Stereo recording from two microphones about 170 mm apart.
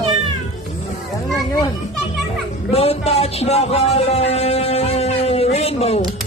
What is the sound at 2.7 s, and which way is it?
Speech, 35° left (ahead or behind).